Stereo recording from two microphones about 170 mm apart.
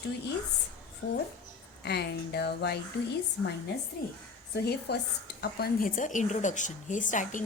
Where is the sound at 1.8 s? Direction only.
75° left (ahead or behind).